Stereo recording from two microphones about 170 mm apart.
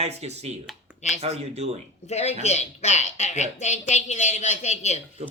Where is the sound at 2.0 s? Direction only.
40° left (ahead or behind).